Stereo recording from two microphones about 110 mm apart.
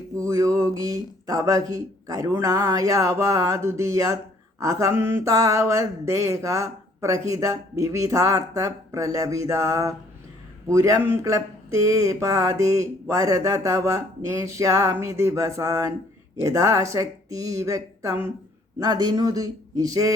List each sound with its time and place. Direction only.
0.2 s speech: 25° right (ahead or behind)
4.6 s mantra: 30° right (ahead or behind)
16.4 s speech: 30° right (ahead or behind)
18.8 s speech: 40° right (ahead or behind)